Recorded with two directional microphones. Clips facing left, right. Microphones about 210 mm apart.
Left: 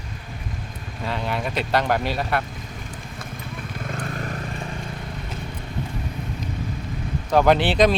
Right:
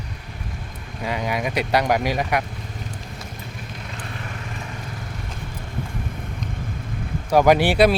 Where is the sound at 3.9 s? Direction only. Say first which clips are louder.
Left 6 dB; 40° left (ahead or behind).